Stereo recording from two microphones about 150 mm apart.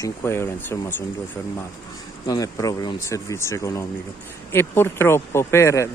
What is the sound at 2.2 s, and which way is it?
Speech, 25° left (ahead or behind).